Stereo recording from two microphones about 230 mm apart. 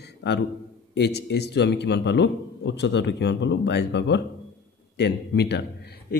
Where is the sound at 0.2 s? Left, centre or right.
Left.